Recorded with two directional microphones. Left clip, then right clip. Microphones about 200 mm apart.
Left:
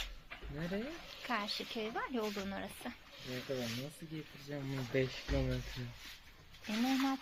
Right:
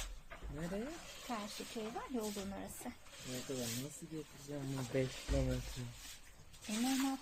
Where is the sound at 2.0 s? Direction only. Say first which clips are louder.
Left 5 dB; 20° left (ahead or behind).